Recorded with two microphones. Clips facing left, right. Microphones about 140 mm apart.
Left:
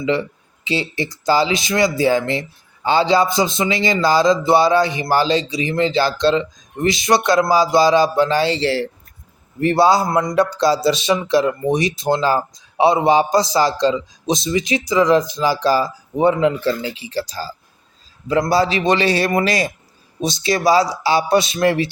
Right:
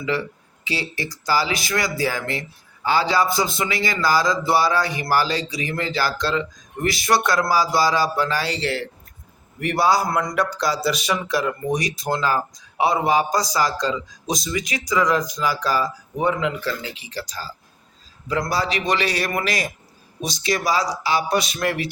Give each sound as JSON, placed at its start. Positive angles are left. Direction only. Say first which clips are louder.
{"t": 0.0, "sound": "speech", "louder": "left 5 dB", "side_deg": 25}